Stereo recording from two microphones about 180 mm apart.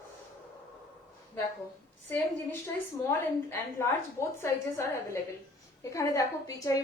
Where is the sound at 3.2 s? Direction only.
15° left (ahead or behind).